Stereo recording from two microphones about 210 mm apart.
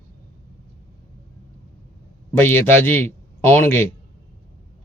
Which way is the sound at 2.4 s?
10° left (ahead or behind).